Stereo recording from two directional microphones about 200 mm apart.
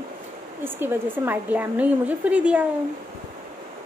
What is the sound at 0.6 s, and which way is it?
Speech, 10° right (ahead or behind).